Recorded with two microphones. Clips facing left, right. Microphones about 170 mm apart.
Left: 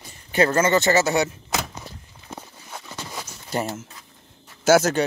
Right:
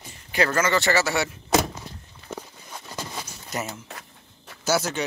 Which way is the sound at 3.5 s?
30° left (ahead or behind).